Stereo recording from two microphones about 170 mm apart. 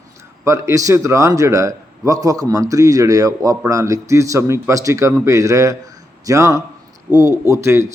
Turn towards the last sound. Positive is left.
turn(degrees=-15)  # may be behind; listen again after turning